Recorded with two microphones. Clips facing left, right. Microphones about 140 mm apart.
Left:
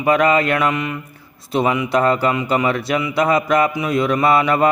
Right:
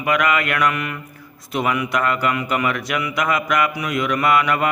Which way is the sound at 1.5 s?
25° left (ahead or behind).